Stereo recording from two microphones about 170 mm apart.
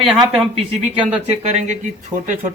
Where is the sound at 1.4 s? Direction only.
45° right (ahead or behind).